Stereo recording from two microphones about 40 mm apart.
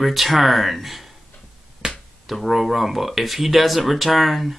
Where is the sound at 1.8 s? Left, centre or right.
Right.